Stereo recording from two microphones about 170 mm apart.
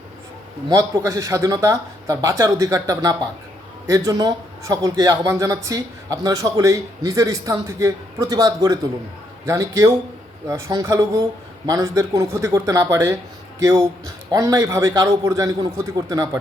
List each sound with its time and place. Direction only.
0.7 s a man's voice: 20° right (ahead or behind)